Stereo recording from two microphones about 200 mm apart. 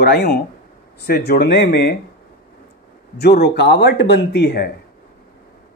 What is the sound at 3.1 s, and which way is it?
Speech, 55° left (ahead or behind).